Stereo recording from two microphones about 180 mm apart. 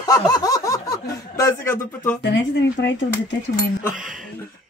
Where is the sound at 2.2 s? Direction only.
75° left (ahead or behind).